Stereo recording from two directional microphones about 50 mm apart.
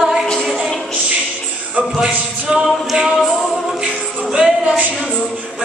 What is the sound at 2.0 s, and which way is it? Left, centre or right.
Singing, centre.